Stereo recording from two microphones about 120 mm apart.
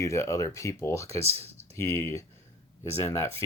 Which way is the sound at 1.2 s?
55° right (ahead or behind).